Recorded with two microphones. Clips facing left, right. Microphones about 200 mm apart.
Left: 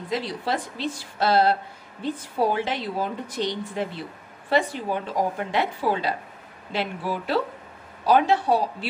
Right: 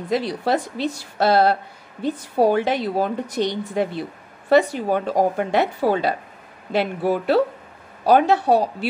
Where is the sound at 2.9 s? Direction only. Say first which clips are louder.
Right 6 dB; 50° right (ahead or behind).